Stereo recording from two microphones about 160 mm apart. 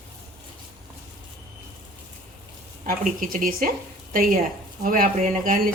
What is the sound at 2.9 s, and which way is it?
Speech, 60° right (ahead or behind).